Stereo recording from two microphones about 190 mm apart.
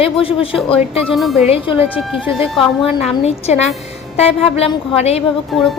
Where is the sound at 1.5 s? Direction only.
30° left (ahead or behind).